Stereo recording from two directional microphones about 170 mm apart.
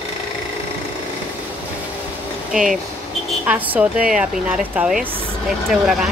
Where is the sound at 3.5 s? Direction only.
5° right (ahead or behind).